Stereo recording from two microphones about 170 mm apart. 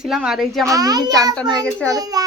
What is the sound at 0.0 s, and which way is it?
Speech, 5° right (ahead or behind).